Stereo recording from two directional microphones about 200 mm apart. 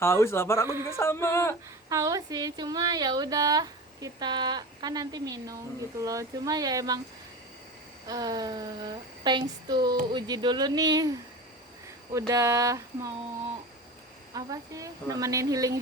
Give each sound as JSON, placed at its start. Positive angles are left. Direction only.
{"t": 0.0, "sound": "a sound", "side_deg": 15}
{"t": 1.9, "sound": "a woman's voice", "side_deg": -15}
{"t": 8.0, "sound": "a woman's voice", "side_deg": -20}
{"t": 12.1, "sound": "a woman's voice", "side_deg": -15}
{"t": 14.3, "sound": "a woman's voice", "side_deg": -15}